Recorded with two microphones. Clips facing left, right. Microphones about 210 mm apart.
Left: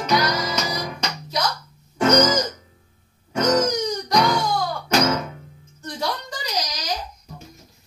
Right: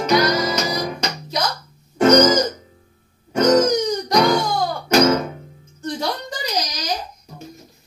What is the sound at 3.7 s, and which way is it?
Music, 50° right (ahead or behind).